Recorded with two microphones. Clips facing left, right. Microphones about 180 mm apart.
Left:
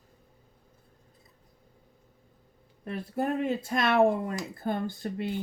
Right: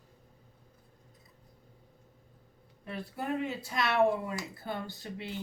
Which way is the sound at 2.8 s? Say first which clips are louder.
Left 6 dB; 45° left (ahead or behind).